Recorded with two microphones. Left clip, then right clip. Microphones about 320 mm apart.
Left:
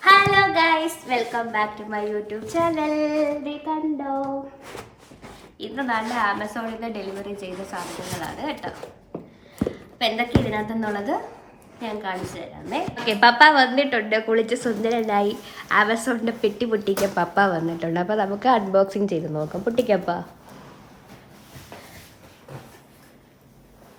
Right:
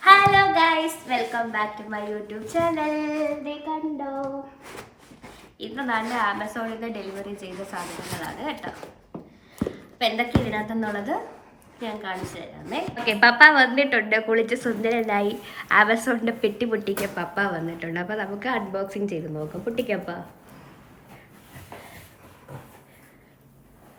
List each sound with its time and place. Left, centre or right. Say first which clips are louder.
0.0 s a child's voice: even; centre
5.5 s a woman's voice: left 1 dB; centre
16.9 s speech: left 6 dB; centre